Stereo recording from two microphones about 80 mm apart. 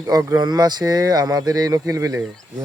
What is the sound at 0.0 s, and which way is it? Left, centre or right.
Speech, right.